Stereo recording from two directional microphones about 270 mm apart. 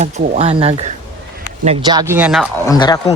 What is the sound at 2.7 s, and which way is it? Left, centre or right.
Speech, centre.